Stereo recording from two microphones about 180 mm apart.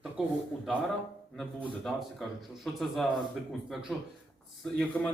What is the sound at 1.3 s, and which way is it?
A man's voice, 5° left (ahead or behind).